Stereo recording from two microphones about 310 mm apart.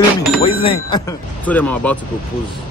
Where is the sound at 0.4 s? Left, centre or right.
Centre.